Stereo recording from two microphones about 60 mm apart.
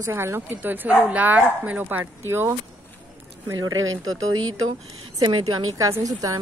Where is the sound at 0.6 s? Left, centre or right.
Right.